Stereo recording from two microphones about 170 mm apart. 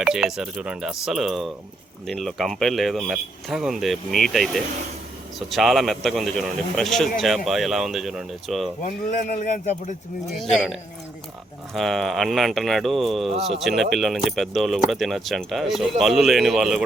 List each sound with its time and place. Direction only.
0.0 s speech: 5° right (ahead or behind)
8.8 s speech: 45° left (ahead or behind)
11.7 s speech: centre (ahead or behind)